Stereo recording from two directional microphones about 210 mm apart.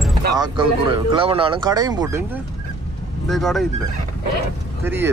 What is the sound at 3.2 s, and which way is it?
Speech, centre (ahead or behind).